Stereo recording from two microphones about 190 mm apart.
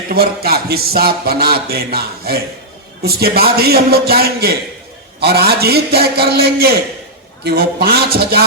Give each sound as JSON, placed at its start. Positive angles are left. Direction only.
{"t": 0.1, "sound": "speech", "side_deg": -55}